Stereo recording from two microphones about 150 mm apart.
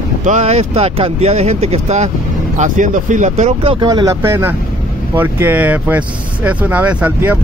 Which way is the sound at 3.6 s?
35° right (ahead or behind).